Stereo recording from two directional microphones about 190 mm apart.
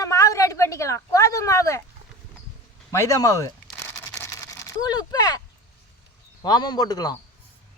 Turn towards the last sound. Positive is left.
turn(degrees=20)  # may be behind; listen again after turning